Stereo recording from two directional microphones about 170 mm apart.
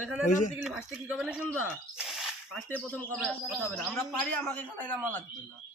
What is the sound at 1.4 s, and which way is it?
Speech, 10° left (ahead or behind).